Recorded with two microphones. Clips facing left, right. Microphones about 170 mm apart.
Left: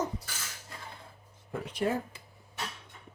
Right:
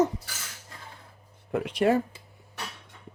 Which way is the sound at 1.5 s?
80° right.